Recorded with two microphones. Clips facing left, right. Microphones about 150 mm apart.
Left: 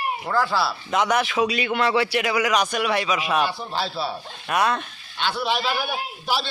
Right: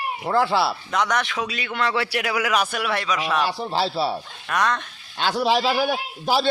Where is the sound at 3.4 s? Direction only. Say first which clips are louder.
Right 4 dB; 30° right (ahead or behind).